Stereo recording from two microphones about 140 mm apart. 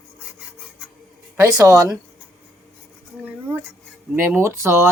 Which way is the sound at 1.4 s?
20° right (ahead or behind).